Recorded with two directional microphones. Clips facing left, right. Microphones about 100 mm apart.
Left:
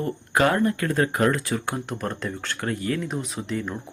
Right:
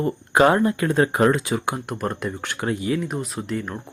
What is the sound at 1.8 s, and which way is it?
Speech, 5° right (ahead or behind).